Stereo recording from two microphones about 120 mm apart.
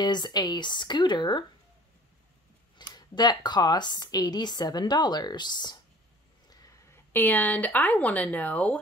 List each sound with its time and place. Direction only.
0.0 s speech: 35° left (ahead or behind)
2.8 s speech: 35° left (ahead or behind)
6.9 s speech: 15° left (ahead or behind)